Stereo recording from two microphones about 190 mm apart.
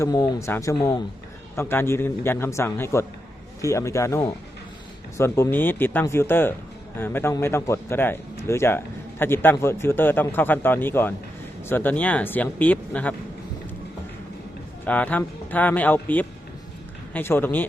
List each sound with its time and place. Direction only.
0.0 s speech: 15° left (ahead or behind)
14.8 s speech: 10° left (ahead or behind)